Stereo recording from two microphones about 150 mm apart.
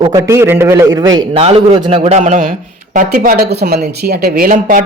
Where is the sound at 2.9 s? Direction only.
70° right (ahead or behind).